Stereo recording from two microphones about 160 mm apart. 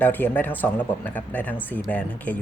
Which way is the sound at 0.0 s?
10° left (ahead or behind).